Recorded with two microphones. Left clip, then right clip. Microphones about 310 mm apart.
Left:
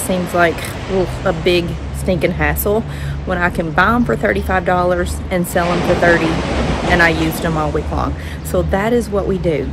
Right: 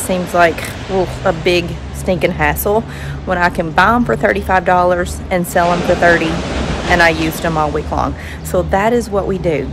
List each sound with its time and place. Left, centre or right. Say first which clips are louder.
0.1 s speech: right 3 dB; centre
5.7 s speech: right 2 dB; left
6.1 s a sound: even; left
6.9 s speech: right 2 dB; centre